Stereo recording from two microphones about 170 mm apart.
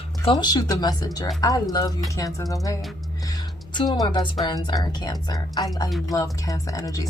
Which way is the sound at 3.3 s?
25° left (ahead or behind).